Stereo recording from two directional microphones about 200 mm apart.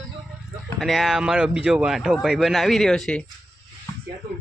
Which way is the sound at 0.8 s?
Centre (ahead or behind).